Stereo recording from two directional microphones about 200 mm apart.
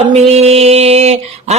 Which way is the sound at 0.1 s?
30° right (ahead or behind).